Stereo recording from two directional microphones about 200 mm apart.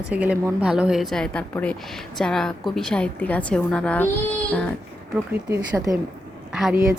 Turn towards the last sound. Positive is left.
turn(degrees=0)  # may be behind; listen again after turning